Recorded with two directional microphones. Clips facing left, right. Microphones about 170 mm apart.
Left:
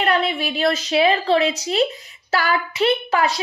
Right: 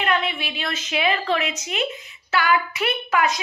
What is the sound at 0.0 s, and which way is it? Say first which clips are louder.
A woman's voice: left 4 dB; 35° left (ahead or behind).